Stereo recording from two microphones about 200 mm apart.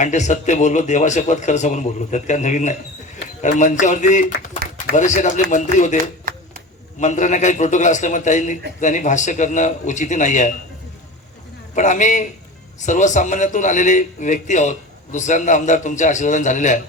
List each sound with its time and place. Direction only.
0.0 s a man's voice: 35° left (ahead or behind)
6.3 s a sound: 45° right (ahead or behind)
7.0 s a man's voice: 35° left (ahead or behind)
11.7 s a man's voice: 40° left (ahead or behind)